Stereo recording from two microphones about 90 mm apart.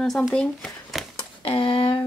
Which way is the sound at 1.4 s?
90° left.